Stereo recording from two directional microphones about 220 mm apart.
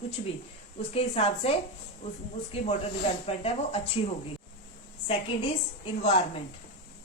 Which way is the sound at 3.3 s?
25° left (ahead or behind).